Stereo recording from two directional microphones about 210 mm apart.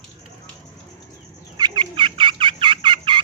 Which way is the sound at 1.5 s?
20° right (ahead or behind).